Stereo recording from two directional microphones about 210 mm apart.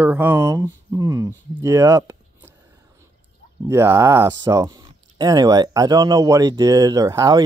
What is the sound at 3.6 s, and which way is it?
Speech, 10° right (ahead or behind).